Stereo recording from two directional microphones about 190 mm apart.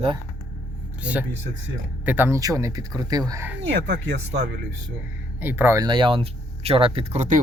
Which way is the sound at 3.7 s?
70° right (ahead or behind).